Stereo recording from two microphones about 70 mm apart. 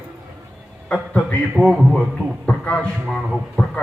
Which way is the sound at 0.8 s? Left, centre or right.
Centre.